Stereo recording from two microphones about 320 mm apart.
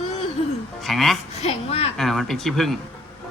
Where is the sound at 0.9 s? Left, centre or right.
Centre.